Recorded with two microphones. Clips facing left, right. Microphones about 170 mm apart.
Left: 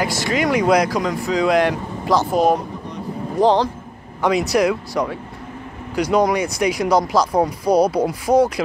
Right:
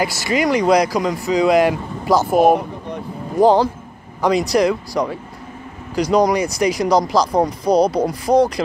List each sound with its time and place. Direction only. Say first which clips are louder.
0.0 s speech: right 1 dB; 5° right (ahead or behind)
2.3 s speech: right 3 dB; 55° right (ahead or behind)
3.3 s speech: right 3 dB; 5° right (ahead or behind)